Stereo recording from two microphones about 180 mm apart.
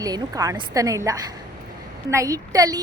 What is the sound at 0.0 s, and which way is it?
A woman's voice, 20° right (ahead or behind).